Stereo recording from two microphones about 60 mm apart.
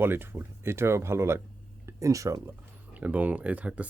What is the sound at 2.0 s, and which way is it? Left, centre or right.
Speech, right.